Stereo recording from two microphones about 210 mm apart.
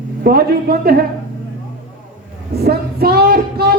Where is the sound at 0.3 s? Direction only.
45° right (ahead or behind).